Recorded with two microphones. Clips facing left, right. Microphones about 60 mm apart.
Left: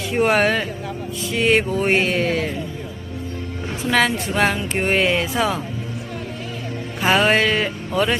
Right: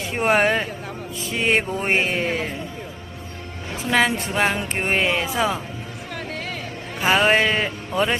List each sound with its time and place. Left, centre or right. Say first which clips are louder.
0.1 s speech: left 1 dB; centre
3.8 s a woman's voice: left 1 dB; centre
7.0 s a woman's voice: left 1 dB; centre